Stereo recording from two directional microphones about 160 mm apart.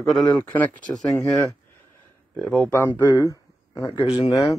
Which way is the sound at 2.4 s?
10° left (ahead or behind).